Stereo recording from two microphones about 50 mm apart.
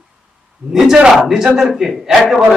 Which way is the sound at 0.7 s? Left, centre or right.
Centre.